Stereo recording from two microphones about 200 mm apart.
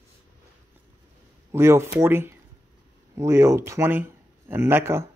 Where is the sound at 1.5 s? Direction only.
15° right (ahead or behind).